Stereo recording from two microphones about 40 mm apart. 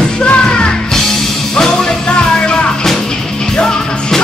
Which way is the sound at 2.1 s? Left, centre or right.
Left.